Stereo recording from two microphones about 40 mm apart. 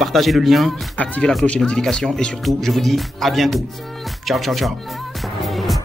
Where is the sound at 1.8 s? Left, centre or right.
Centre.